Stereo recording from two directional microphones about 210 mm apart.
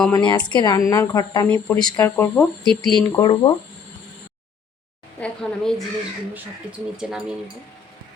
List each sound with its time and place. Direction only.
0.1 s a woman's voice: 20° left (ahead or behind); by 3.0 s 5° left (ahead or behind)
3.1 s speech: 15° left (ahead or behind)
5.2 s speech: 5° left (ahead or behind)